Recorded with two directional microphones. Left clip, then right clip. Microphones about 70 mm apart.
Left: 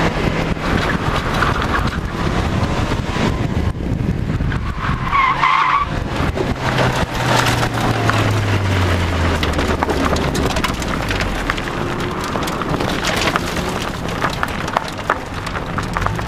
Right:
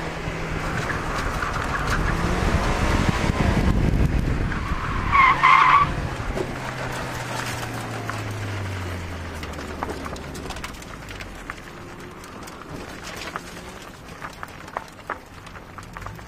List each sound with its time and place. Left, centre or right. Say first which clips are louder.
0.7 s boat: left 7 dB; right
5.1 s skidding: even; right
6.8 s a sound: left 11 dB; right
14.2 s run: left 15 dB; right